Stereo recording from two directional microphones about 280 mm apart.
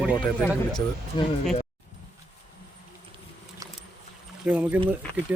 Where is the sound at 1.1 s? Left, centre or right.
Centre.